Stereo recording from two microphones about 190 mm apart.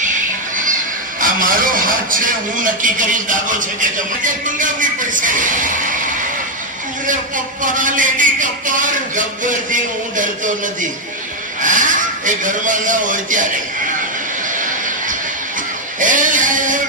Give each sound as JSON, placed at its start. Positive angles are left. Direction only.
{"t": 1.2, "sound": "a man's voice", "side_deg": -45}
{"t": 7.1, "sound": "a man's voice", "side_deg": -45}
{"t": 14.5, "sound": "a sound", "side_deg": -45}